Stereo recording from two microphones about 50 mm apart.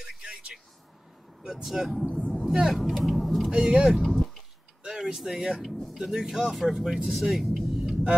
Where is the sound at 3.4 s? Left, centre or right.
Centre.